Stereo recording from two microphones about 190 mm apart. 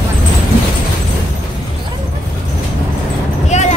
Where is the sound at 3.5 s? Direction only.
35° left (ahead or behind).